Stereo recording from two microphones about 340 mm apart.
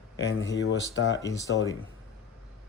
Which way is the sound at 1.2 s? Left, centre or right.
Centre.